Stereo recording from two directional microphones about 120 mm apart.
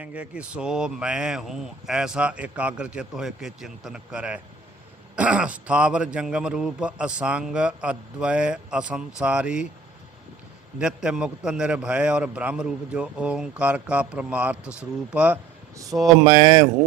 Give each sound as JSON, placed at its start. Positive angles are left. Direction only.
{"t": 0.0, "sound": "a man's voice", "side_deg": -10}
{"t": 10.8, "sound": "a man's voice", "side_deg": -5}
{"t": 15.8, "sound": "speech", "side_deg": -30}